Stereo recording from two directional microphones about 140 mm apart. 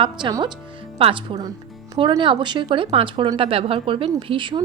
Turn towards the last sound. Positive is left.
turn(degrees=-35)  # may be behind; listen again after turning